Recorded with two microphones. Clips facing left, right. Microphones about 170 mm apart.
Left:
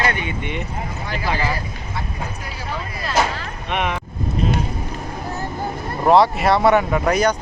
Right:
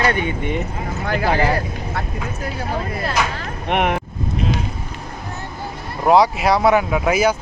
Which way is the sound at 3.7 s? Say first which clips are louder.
Right 4 dB; 60° right (ahead or behind).